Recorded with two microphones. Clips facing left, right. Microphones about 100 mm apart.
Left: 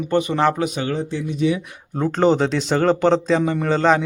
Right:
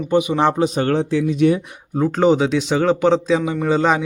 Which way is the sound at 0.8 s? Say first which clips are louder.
Right 6 dB; 80° right.